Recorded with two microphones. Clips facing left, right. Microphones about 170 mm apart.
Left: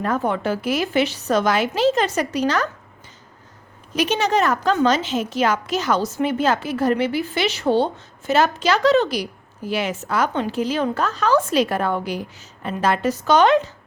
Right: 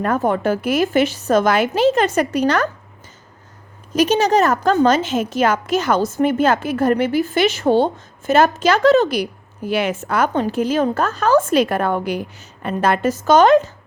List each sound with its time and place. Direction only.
0.0 s a woman's voice: 50° right (ahead or behind)
3.9 s a woman's voice: 40° right (ahead or behind)